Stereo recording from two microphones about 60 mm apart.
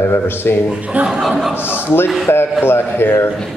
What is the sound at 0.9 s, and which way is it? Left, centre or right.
Speech, right.